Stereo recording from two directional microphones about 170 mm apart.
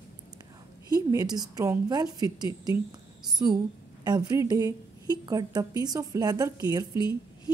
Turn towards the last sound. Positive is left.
turn(degrees=-20)  # may be behind; listen again after turning